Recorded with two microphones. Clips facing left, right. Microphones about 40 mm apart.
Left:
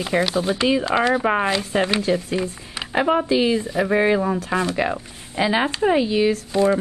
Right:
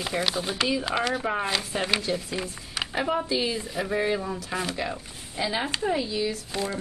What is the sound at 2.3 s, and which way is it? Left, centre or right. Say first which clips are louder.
Speech: left 7 dB; centre.